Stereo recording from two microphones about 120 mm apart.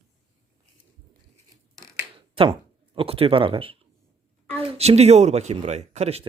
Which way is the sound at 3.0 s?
50° right (ahead or behind).